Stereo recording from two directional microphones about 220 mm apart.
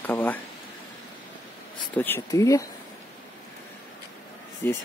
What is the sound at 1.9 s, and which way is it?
Speech, 10° left (ahead or behind).